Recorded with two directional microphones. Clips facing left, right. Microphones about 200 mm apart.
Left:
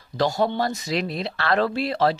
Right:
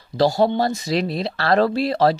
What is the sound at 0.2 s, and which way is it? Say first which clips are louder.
Speech: right 5 dB; 35° right (ahead or behind).